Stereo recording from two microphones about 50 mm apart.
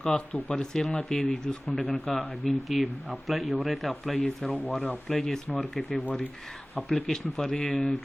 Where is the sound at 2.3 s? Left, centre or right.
Centre.